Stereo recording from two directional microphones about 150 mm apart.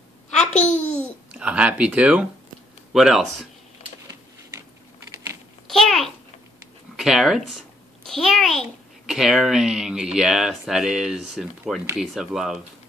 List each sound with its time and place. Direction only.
0.5 s babbling: 50° left (ahead or behind)
1.0 s a child's voice: 5° right (ahead or behind)
5.7 s a sound: centre (ahead or behind)
7.0 s a child's voice: centre (ahead or behind)